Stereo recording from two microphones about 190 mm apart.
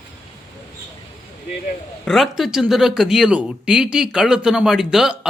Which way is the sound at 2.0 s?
Centre (ahead or behind).